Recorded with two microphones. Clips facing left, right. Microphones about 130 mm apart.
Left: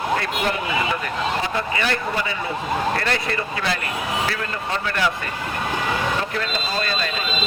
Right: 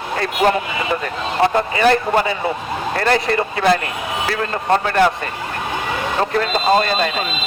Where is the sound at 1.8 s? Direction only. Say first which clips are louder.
Right 12 dB; 40° right (ahead or behind).